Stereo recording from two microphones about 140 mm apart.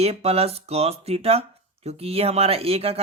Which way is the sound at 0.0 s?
45° right (ahead or behind).